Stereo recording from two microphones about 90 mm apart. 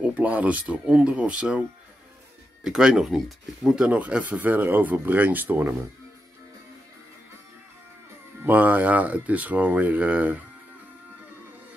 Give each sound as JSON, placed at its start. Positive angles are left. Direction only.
{"t": 0.0, "sound": "speech", "side_deg": -15}
{"t": 8.5, "sound": "speech", "side_deg": -20}